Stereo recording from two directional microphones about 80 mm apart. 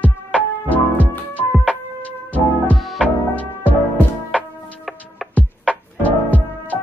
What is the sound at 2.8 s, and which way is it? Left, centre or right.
Music, centre.